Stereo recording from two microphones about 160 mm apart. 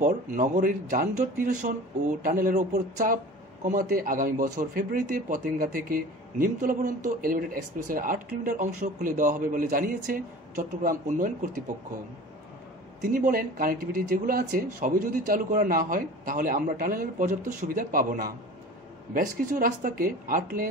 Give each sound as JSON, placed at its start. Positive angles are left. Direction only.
{"t": 0.0, "sound": "speech", "side_deg": -55}
{"t": 13.0, "sound": "speech", "side_deg": -60}